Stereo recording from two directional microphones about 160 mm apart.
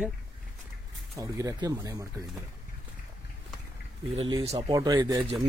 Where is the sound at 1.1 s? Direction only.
20° right (ahead or behind).